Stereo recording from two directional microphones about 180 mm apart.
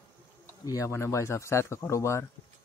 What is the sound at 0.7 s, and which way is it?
Speech, 15° left (ahead or behind).